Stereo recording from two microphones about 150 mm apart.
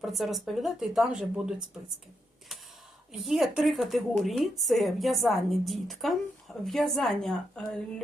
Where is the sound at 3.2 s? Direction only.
Centre (ahead or behind).